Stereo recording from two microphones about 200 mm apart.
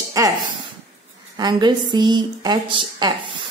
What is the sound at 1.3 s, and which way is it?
A woman's voice, 20° right (ahead or behind).